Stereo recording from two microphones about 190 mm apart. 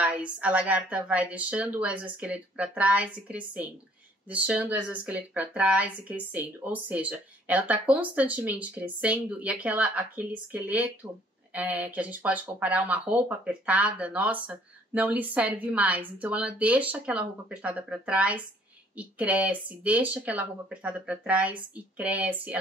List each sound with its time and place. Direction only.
0.0 s speech: 5° right (ahead or behind)